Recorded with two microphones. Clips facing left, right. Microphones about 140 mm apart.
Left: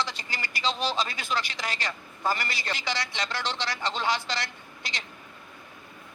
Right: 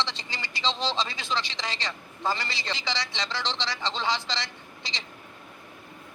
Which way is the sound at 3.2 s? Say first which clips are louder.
Even; 10° left (ahead or behind).